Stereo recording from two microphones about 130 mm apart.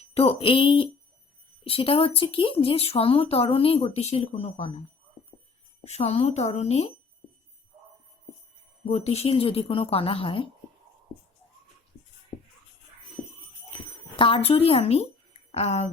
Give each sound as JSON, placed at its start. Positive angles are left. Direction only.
{"t": 0.1, "sound": "speech", "side_deg": 50}
{"t": 5.8, "sound": "speech", "side_deg": 55}
{"t": 8.9, "sound": "speech", "side_deg": 50}
{"t": 14.2, "sound": "speech", "side_deg": 40}